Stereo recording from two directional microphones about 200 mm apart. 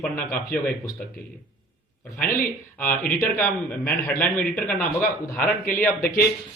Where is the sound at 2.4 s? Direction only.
45° left (ahead or behind).